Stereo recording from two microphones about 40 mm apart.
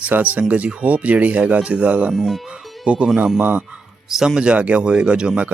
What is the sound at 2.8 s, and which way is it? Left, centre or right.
Speech, right.